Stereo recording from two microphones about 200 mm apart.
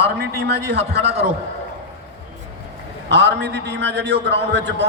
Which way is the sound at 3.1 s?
60° right (ahead or behind).